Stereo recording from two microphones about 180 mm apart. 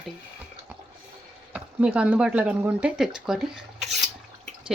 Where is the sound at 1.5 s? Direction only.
5° right (ahead or behind).